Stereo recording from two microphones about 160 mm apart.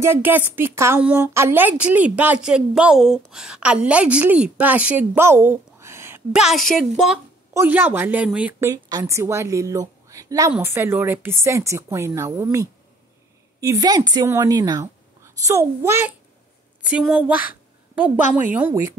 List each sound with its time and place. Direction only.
0.0 s a woman's voice: 15° right (ahead or behind)
6.3 s a woman's voice: centre (ahead or behind)
7.5 s a woman's voice: 15° right (ahead or behind)